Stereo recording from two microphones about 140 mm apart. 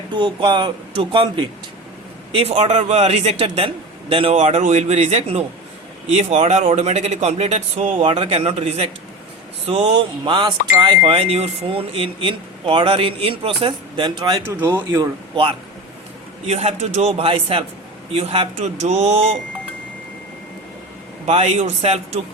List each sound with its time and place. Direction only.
0.1 s a man's voice: 35° right (ahead or behind)
9.9 s speech: 35° right (ahead or behind)
14.4 s speech: 15° right (ahead or behind)
16.5 s a man's voice: 50° right (ahead or behind)
18.5 s speech: 55° right (ahead or behind)
21.2 s a man's voice: 50° right (ahead or behind)